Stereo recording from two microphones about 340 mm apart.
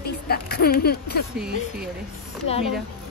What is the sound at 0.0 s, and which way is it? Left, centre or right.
Speech, left.